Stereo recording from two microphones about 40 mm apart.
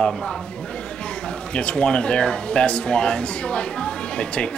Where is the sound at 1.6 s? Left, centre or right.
Left.